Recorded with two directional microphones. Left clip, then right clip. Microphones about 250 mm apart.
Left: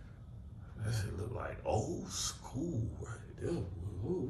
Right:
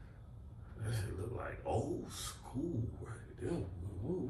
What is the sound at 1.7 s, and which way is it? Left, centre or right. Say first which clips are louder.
Speech: left 2 dB; centre.